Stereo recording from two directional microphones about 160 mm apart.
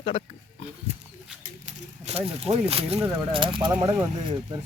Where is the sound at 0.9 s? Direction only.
40° right (ahead or behind).